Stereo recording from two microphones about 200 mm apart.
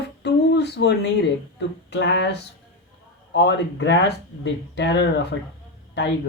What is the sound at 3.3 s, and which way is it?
Speech, 60° left (ahead or behind).